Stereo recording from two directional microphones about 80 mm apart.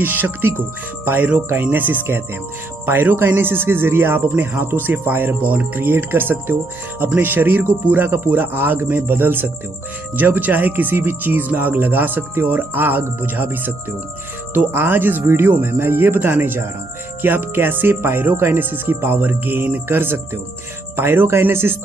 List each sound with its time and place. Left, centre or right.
0.0 s speech: right